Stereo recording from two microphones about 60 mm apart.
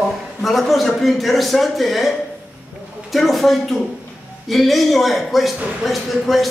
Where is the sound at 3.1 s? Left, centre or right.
Centre.